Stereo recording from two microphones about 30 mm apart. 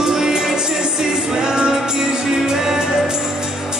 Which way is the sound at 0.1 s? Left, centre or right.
Centre.